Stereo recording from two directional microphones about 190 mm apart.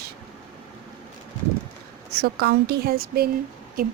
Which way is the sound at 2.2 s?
55° right (ahead or behind).